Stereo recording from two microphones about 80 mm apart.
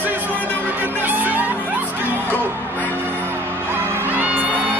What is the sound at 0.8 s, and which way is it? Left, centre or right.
Music, right.